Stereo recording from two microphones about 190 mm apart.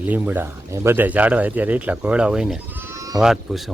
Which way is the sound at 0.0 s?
10° right (ahead or behind).